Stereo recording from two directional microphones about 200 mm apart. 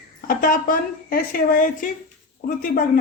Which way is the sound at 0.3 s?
45° left (ahead or behind).